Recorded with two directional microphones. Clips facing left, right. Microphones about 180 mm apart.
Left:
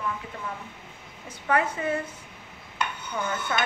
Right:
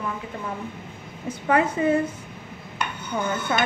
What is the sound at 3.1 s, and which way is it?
Speech, 20° right (ahead or behind).